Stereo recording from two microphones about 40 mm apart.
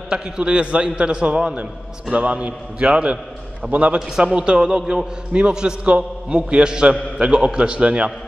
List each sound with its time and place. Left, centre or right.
0.1 s a man's voice: right
3.6 s a man's voice: right
4.2 s a man's voice: right